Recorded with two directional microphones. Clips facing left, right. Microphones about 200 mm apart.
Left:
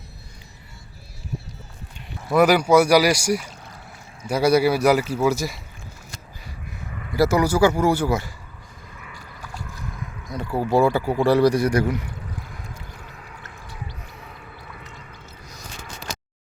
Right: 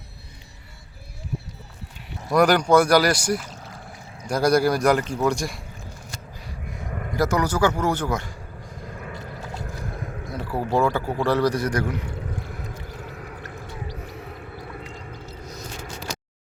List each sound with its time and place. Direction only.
2.3 s speech: 5° left (ahead or behind)
6.9 s a sound: 50° right (ahead or behind)
7.2 s speech: 10° left (ahead or behind)
8.9 s vehicle: 45° right (ahead or behind)
9.6 s boat: 55° right (ahead or behind)
10.3 s speech: centre (ahead or behind)
12.7 s vehicle: 55° right (ahead or behind)
13.8 s a sound: 40° right (ahead or behind)
15.3 s a sound: 60° right (ahead or behind)